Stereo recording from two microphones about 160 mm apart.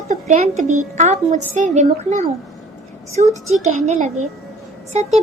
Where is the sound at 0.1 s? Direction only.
45° right (ahead or behind).